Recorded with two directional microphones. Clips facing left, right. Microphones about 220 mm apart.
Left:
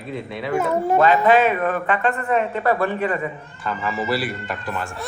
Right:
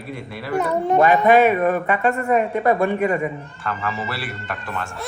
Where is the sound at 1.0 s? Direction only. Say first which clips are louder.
Right 2 dB; 15° right (ahead or behind).